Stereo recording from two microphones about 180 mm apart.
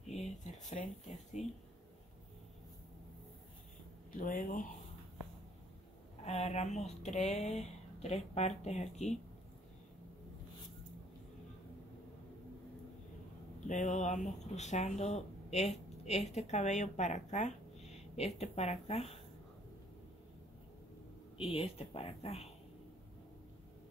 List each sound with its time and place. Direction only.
0.1 s a sound: 40° left (ahead or behind)
1.1 s speech: 40° left (ahead or behind)
4.1 s speech: 50° left (ahead or behind)
6.2 s speech: 35° left (ahead or behind)
13.7 s speech: 45° left (ahead or behind)
21.4 s speech: 30° left (ahead or behind)